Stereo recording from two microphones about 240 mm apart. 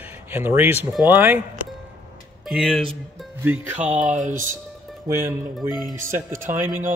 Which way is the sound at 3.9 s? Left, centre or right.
Right.